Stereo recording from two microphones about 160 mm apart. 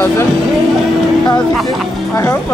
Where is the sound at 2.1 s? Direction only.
15° left (ahead or behind).